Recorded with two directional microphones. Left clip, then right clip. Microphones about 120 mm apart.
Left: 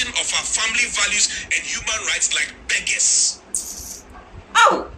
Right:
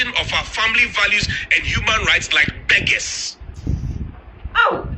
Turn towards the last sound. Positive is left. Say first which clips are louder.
# left 2 dB
turn(degrees=0)  # may be behind; listen again after turning